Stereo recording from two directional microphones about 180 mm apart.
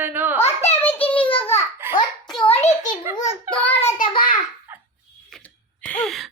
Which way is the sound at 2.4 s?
35° left (ahead or behind).